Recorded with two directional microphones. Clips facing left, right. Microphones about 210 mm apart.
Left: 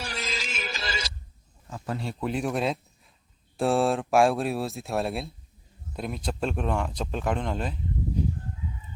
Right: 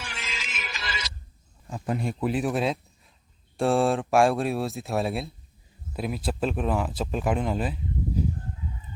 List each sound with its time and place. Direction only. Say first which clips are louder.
0.0 s music: left 5 dB; 40° left (ahead or behind)
1.7 s speech: right 4 dB; 15° right (ahead or behind)
2.2 s speech: right 1 dB; 5° right (ahead or behind)